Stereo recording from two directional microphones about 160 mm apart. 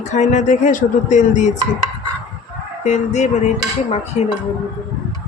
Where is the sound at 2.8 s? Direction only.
45° left (ahead or behind).